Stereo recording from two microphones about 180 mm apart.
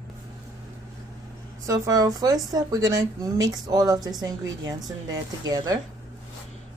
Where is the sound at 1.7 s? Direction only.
20° right (ahead or behind).